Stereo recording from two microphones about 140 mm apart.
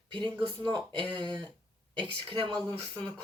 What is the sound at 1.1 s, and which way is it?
A woman's voice, 30° right (ahead or behind).